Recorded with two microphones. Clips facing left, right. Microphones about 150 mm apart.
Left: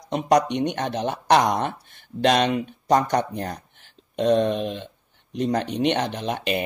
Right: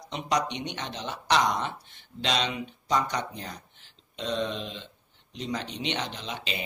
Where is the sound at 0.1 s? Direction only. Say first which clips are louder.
Left 9 dB; 50° left (ahead or behind).